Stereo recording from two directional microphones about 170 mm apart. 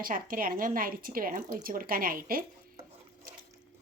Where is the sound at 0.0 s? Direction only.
55° right (ahead or behind).